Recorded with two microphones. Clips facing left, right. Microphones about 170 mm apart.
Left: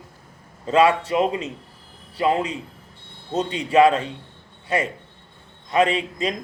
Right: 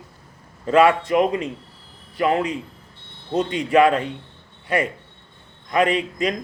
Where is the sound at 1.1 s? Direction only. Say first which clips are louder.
Right 2 dB; 30° left (ahead or behind).